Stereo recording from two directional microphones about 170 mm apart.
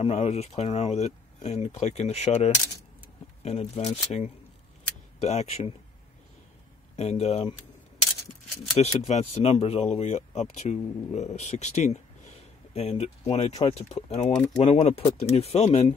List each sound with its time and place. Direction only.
0.0 s speech: 40° left (ahead or behind)
7.0 s speech: 40° left (ahead or behind)
8.7 s speech: 40° left (ahead or behind)